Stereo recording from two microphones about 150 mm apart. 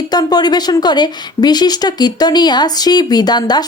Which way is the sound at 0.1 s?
25° left (ahead or behind).